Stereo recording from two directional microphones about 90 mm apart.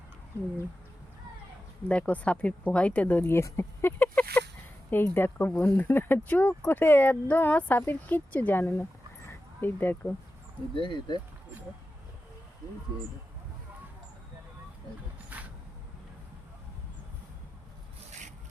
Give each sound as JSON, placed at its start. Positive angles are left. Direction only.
{"t": 1.9, "sound": "speech", "side_deg": 15}
{"t": 10.8, "sound": "speech", "side_deg": 60}
{"t": 15.3, "sound": "a sound", "side_deg": -20}